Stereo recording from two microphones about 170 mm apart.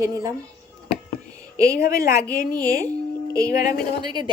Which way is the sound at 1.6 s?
60° left (ahead or behind).